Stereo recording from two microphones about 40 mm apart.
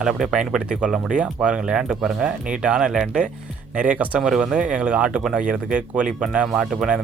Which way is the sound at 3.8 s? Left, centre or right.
Right.